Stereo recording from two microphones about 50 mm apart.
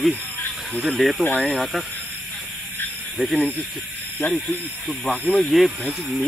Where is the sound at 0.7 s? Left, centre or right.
Centre.